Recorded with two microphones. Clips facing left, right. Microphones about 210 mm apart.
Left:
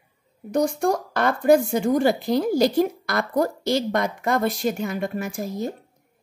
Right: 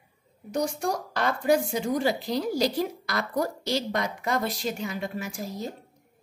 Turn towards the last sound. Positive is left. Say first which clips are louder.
# left 6 dB
turn(degrees=50)  # may be behind; listen again after turning